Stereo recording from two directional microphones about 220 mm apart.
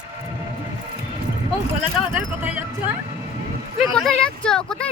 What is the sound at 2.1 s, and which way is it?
Music, 5° right (ahead or behind).